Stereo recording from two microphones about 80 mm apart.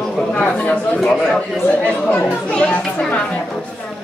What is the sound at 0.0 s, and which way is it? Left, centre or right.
Speech, centre.